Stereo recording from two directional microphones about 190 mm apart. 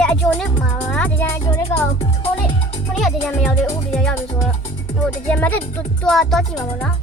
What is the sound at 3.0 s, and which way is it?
Speech, 5° left (ahead or behind).